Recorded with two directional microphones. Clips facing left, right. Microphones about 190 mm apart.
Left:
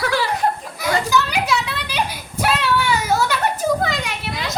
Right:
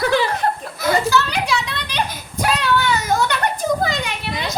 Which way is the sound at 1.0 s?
15° left (ahead or behind).